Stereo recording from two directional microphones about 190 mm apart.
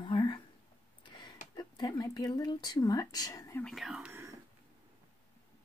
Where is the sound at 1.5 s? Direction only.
20° left (ahead or behind).